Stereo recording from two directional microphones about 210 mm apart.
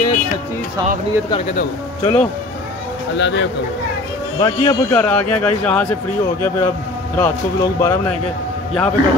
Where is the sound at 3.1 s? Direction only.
60° left (ahead or behind).